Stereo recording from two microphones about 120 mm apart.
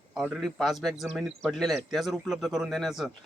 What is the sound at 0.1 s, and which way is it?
A man's voice, 5° right (ahead or behind).